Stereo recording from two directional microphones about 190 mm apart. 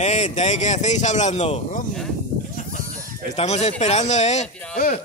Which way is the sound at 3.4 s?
35° left (ahead or behind).